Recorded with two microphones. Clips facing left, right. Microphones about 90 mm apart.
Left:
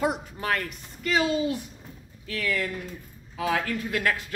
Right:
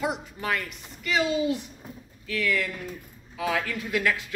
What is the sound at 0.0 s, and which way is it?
Speech, 45° left (ahead or behind).